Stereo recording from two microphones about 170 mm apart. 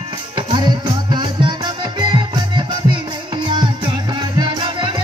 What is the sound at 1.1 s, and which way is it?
Music, 25° right (ahead or behind).